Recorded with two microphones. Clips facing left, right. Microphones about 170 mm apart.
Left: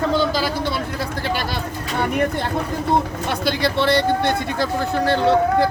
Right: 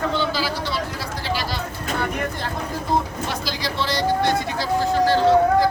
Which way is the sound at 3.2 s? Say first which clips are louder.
Left 6 dB; 60° left (ahead or behind).